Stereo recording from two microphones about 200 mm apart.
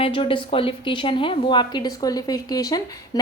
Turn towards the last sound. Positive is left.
turn(degrees=20)  # may be behind; listen again after turning